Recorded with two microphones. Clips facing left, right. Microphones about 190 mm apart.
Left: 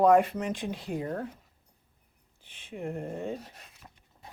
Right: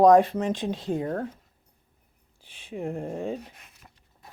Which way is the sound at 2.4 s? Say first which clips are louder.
Right 4 dB; 30° right (ahead or behind).